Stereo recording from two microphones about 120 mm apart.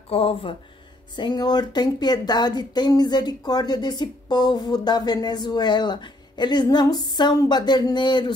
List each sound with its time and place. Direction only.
0.1 s speech: 50° left (ahead or behind)
1.1 s speech: 35° left (ahead or behind)